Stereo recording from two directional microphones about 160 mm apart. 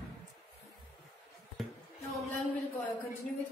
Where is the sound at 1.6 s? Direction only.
Centre (ahead or behind).